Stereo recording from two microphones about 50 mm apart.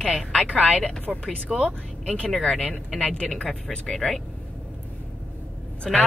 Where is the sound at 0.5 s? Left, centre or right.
Left.